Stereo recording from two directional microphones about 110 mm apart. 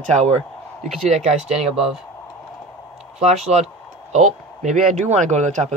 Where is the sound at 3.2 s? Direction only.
90° right.